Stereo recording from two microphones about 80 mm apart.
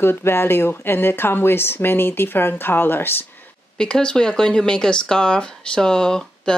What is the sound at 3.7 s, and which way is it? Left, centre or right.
Speech, centre.